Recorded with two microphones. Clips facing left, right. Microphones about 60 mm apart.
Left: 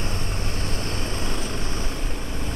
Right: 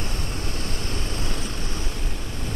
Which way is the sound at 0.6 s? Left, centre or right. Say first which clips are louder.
Left 2 dB; left.